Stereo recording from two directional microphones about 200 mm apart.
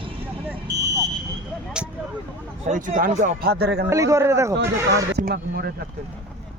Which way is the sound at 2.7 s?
40° right (ahead or behind).